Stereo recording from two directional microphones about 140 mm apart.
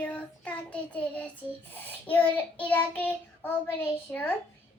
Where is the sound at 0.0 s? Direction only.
10° left (ahead or behind).